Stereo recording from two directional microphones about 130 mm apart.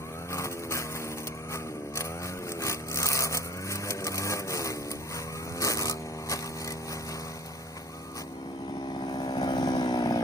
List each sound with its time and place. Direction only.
0.3 s vehicle: 20° left (ahead or behind)
2.6 s wood: 25° left (ahead or behind)
5.5 s a sound: 25° left (ahead or behind)
9.0 s vehicle: 35° left (ahead or behind)